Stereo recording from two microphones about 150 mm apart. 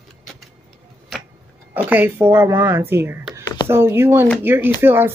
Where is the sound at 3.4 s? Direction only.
25° left (ahead or behind).